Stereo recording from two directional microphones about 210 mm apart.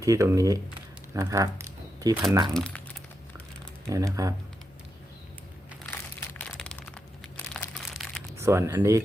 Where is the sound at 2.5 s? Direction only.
5° left (ahead or behind).